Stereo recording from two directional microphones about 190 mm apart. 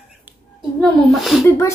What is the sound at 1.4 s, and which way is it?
Speech, 15° left (ahead or behind).